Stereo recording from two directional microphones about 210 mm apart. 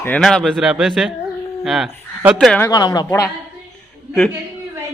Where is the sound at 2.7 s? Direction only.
20° left (ahead or behind).